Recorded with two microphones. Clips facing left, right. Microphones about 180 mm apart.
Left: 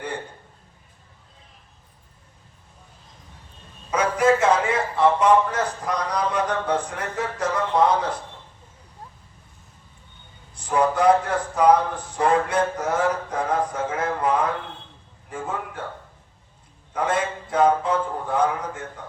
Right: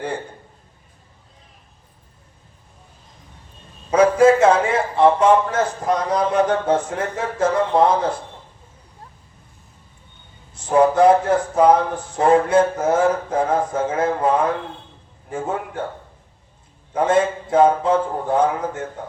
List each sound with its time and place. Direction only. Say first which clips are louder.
4.2 s a man's voice: right 3 dB; 25° right (ahead or behind)
10.5 s a man's voice: right 6 dB; 25° right (ahead or behind)
16.9 s a man's voice: right 7 dB; 25° right (ahead or behind)